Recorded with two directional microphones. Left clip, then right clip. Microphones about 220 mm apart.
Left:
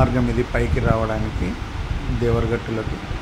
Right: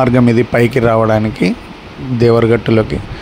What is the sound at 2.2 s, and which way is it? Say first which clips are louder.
Speech: right 12 dB; 45° right (ahead or behind).